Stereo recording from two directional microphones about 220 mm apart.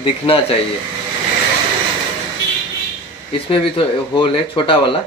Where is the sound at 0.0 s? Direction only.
25° left (ahead or behind).